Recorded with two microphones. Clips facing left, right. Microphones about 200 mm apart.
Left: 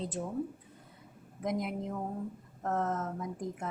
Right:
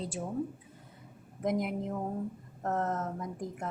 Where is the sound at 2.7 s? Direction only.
Centre (ahead or behind).